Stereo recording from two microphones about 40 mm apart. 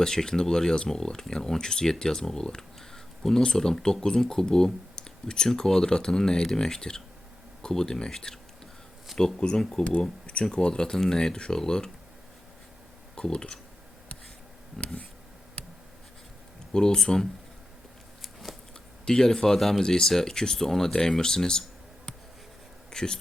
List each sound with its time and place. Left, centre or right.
0.0 s speech: centre
10.0 s speech: left
13.1 s speech: centre
16.7 s speech: centre
19.0 s speech: centre
22.9 s a sound: centre